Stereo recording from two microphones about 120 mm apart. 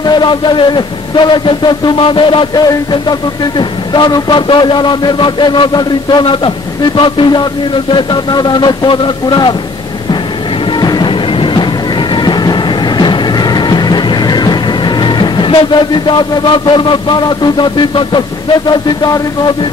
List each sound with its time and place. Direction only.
0.0 s speech: 40° left (ahead or behind)
10.8 s music: 35° left (ahead or behind)
18.7 s speech: 35° left (ahead or behind)